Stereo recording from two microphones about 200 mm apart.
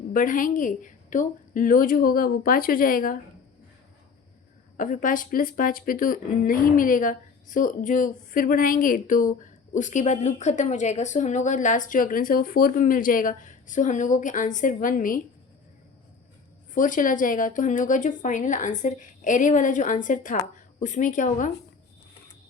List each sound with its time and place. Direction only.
0.1 s a woman's voice: 40° left (ahead or behind)
4.8 s speech: 40° left (ahead or behind)
16.7 s speech: 40° left (ahead or behind)